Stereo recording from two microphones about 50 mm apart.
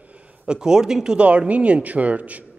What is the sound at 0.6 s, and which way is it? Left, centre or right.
Speech, centre.